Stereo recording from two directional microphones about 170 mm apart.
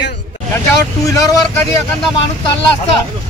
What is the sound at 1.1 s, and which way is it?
Speech, 20° left (ahead or behind).